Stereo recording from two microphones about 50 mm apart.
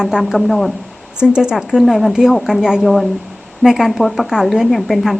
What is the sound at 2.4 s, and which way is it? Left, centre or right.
Speech, centre.